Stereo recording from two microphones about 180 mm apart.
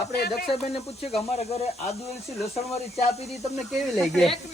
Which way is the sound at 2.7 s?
35° left (ahead or behind).